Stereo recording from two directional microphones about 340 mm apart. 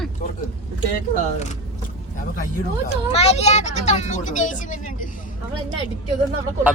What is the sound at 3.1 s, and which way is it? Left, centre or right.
Speech, centre.